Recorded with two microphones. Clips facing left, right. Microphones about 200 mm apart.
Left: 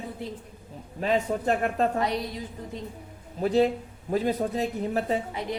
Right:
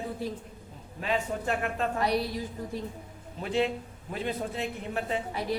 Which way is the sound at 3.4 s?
35° left (ahead or behind).